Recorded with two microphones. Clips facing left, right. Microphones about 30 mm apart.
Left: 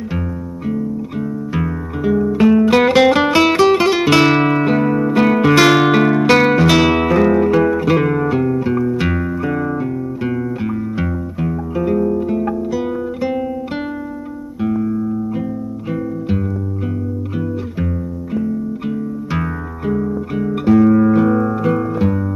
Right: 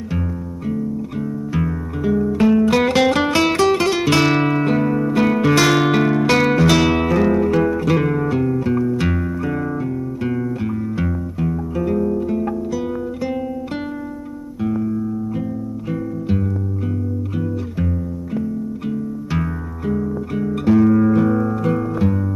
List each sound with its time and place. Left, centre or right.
1.5 s music: centre
14.6 s music: centre
18.3 s music: centre